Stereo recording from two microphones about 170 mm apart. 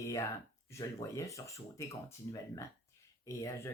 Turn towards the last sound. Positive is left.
turn(degrees=15)  # may be behind; listen again after turning